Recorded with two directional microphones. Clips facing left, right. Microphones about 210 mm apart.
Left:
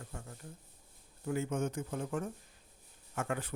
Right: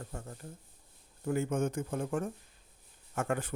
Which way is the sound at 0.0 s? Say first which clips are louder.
Right 4 dB; 40° right (ahead or behind).